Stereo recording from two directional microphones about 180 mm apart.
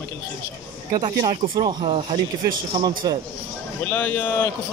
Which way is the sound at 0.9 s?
20° right (ahead or behind).